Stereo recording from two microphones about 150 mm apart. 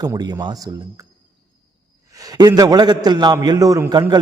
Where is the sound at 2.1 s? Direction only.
25° right (ahead or behind).